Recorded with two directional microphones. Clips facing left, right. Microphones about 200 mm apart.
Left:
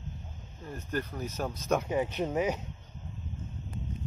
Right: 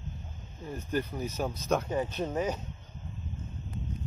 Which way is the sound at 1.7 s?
10° left (ahead or behind).